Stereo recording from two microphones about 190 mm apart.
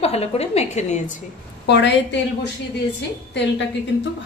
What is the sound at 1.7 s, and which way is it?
Speech, 65° left (ahead or behind).